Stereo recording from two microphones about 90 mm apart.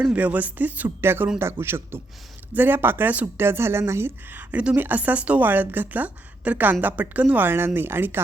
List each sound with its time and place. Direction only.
0.0 s speech: 15° right (ahead or behind)